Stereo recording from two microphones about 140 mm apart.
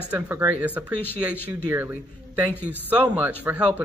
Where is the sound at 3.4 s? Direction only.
10° right (ahead or behind).